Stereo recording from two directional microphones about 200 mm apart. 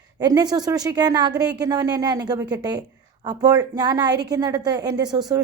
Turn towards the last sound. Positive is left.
turn(degrees=-20)  # may be behind; listen again after turning